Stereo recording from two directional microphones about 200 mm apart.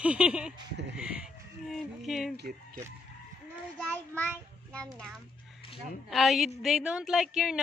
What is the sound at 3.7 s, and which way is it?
Child singing, 10° left (ahead or behind).